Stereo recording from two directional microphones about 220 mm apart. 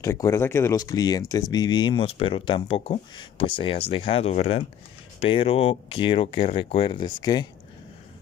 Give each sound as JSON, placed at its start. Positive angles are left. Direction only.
{"t": 0.0, "sound": "speech", "side_deg": 15}